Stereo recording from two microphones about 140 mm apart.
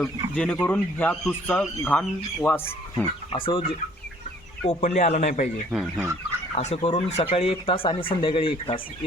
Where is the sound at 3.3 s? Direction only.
40° left (ahead or behind).